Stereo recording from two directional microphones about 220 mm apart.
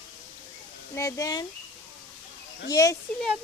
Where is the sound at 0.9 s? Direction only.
15° left (ahead or behind).